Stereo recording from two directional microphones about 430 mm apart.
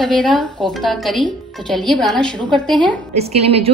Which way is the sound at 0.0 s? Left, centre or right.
Centre.